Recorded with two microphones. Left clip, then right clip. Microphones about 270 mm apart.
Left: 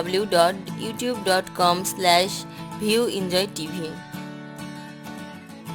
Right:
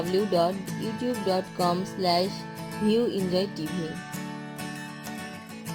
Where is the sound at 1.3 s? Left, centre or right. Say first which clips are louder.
Left 7 dB; left.